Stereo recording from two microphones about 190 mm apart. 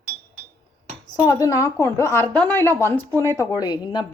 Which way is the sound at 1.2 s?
15° left (ahead or behind).